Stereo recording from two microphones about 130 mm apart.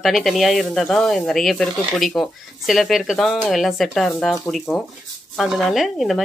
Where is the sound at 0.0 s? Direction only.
Centre (ahead or behind).